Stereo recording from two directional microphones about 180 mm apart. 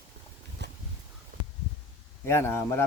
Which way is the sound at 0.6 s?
70° right (ahead or behind).